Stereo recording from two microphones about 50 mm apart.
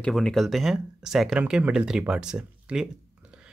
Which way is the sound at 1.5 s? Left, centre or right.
Centre.